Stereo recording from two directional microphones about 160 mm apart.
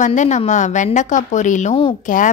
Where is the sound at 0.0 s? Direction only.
50° left (ahead or behind).